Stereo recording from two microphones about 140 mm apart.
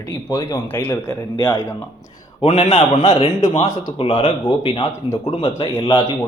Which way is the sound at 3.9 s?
45° left (ahead or behind).